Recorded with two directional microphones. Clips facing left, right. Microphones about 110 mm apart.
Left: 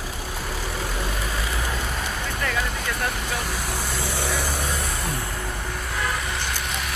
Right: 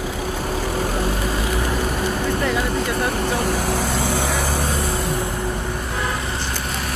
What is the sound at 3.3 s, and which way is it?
Vehicle, 55° right (ahead or behind).